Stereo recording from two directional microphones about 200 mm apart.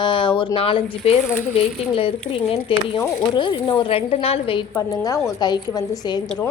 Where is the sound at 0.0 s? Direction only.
25° left (ahead or behind).